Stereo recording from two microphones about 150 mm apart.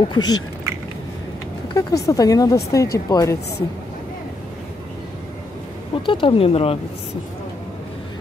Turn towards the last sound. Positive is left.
turn(degrees=40)  # may be behind; listen again after turning